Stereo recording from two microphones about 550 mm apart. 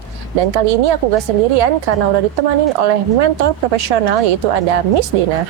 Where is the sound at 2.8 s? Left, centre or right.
Right.